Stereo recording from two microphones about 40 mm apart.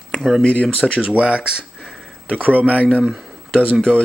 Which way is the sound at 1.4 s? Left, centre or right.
Centre.